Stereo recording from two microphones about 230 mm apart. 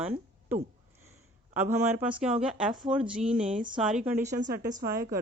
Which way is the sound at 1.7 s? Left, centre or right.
Centre.